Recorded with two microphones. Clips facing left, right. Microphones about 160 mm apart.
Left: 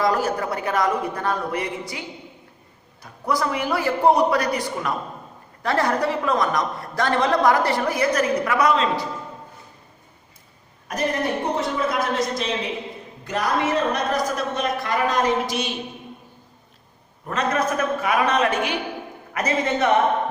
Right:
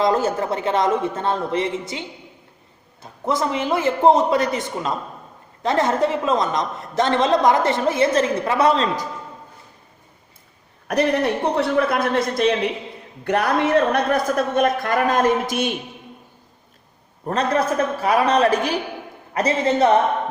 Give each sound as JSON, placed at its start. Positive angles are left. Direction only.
{"t": 0.0, "sound": "a woman's voice", "side_deg": -25}
{"t": 10.8, "sound": "a man's voice", "side_deg": -70}
{"t": 17.2, "sound": "a man's voice", "side_deg": -30}